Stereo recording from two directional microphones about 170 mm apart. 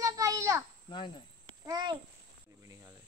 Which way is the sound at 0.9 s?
25° left (ahead or behind).